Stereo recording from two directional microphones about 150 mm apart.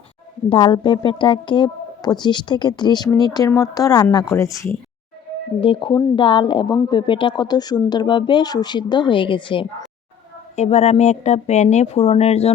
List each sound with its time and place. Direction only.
0.5 s speech: 35° left (ahead or behind)
5.5 s speech: 35° left (ahead or behind)
10.5 s speech: 45° left (ahead or behind)